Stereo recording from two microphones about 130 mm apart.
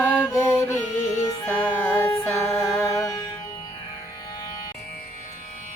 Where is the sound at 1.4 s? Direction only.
15° left (ahead or behind).